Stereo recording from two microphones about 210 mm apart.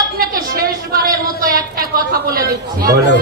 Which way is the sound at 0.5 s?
45° right (ahead or behind).